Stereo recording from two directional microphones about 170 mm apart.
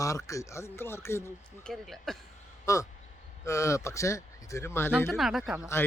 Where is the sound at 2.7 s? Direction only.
20° left (ahead or behind).